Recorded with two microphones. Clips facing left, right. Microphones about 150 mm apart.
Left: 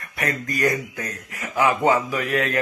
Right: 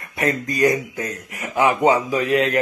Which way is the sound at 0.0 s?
25° right (ahead or behind).